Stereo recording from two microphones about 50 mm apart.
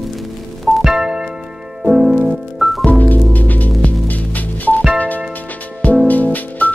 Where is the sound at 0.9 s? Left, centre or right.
Centre.